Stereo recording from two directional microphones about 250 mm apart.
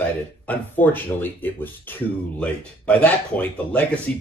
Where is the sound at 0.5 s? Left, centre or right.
Centre.